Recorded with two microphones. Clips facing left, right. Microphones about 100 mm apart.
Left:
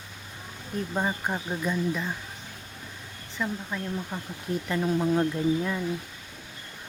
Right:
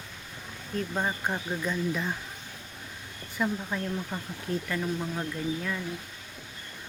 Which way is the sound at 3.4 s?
10° right (ahead or behind).